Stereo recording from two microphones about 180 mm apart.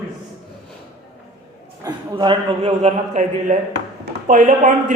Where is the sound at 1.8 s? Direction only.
25° right (ahead or behind).